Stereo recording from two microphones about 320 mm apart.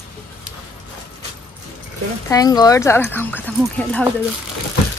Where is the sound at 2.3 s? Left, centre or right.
Centre.